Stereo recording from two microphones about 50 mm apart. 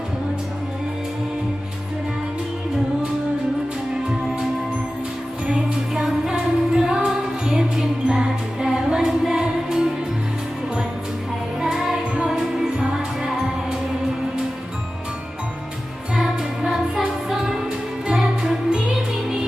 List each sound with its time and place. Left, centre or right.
5.5 s music: right
5.9 s music: centre
11.6 s music: centre
16.1 s music: centre